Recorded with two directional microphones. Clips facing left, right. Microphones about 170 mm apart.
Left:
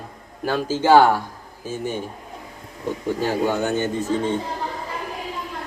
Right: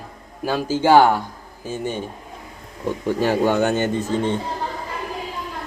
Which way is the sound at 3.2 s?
70° right (ahead or behind).